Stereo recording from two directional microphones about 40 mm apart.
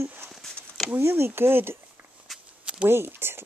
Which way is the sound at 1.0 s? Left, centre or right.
Right.